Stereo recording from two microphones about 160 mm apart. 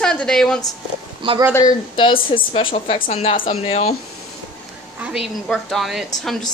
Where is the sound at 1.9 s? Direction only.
35° left (ahead or behind).